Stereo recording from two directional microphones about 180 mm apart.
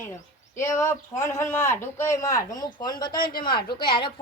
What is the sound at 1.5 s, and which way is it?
A woman's voice, 15° left (ahead or behind).